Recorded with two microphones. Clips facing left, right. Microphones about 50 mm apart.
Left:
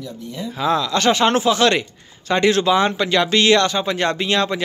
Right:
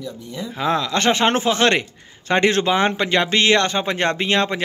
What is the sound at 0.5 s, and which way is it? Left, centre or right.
Speech, right.